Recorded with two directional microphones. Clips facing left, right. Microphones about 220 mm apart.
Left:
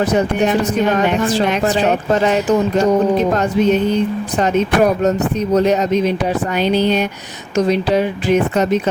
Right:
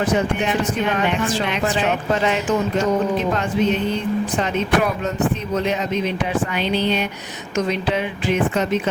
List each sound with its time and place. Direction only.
0.0 s speech: 40° left (ahead or behind)
4.4 s speech: 40° left (ahead or behind)